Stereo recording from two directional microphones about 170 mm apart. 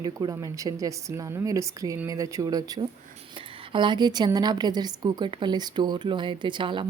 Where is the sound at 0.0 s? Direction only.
20° right (ahead or behind).